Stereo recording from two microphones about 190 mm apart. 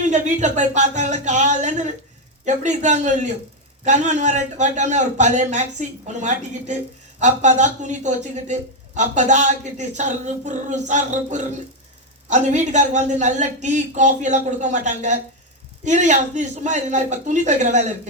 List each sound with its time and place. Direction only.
0.0 s speech: 40° right (ahead or behind)